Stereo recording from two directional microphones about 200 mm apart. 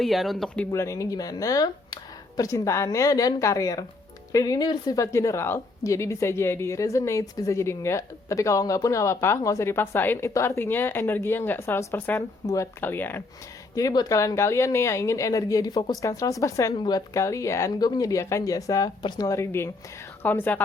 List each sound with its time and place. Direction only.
0.0 s a woman's voice: centre (ahead or behind)